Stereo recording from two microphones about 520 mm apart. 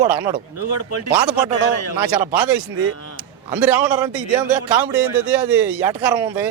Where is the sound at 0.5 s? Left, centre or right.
Left.